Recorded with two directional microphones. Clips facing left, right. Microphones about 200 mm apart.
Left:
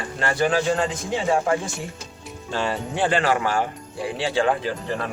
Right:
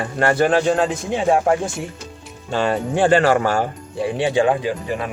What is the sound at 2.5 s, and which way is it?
Speech, 55° right (ahead or behind).